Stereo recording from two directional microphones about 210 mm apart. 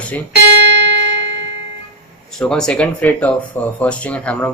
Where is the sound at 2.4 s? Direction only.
5° left (ahead or behind).